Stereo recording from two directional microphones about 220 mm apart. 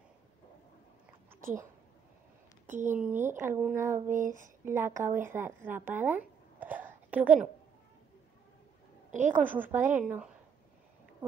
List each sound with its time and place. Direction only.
2.6 s speech: 35° right (ahead or behind)
2.9 s speech: 10° right (ahead or behind)
4.1 s a sound: 35° right (ahead or behind)
4.6 s speech: 10° right (ahead or behind)
9.3 s speech: 10° right (ahead or behind)